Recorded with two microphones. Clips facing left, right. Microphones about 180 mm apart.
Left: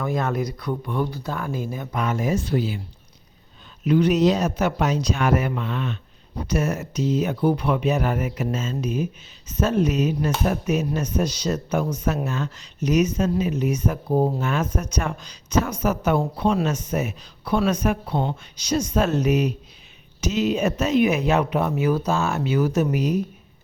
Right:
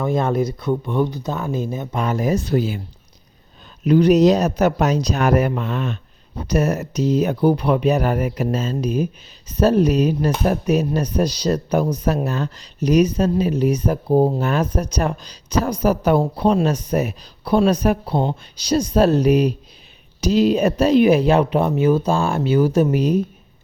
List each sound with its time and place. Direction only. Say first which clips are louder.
0.0 s speech: right 5 dB; 25° right (ahead or behind); by 2.8 s 45° right (ahead or behind)
3.8 s speech: right 5 dB; 40° right (ahead or behind)